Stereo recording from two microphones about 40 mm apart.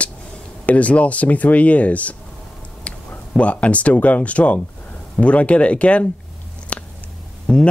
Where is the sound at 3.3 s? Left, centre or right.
Left.